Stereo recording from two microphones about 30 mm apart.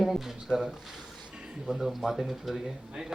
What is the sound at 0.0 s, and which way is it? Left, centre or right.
Speech, centre.